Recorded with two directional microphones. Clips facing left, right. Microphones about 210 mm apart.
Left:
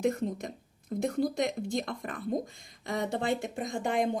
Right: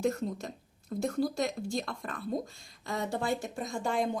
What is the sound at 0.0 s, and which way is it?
Speech, 20° left (ahead or behind).